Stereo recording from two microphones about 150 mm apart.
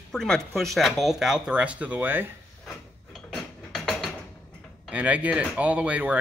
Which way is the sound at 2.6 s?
Centre (ahead or behind).